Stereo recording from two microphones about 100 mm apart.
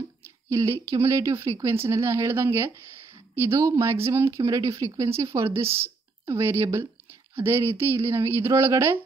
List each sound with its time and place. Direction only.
0.5 s speech: 30° right (ahead or behind)